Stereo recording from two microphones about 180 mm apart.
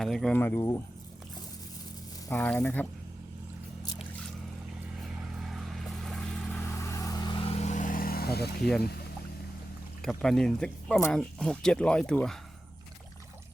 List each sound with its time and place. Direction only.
0.0 s speech: centre (ahead or behind)
2.3 s speech: 10° left (ahead or behind)
5.4 s vehicle: centre (ahead or behind); by 8.4 s 60° left (ahead or behind)
8.8 s speech: 60° left (ahead or behind)
10.0 s speech: centre (ahead or behind)